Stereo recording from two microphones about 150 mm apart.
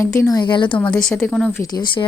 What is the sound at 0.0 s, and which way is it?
Speech, 20° left (ahead or behind).